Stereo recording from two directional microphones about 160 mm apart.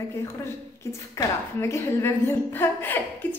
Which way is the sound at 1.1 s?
15° left (ahead or behind).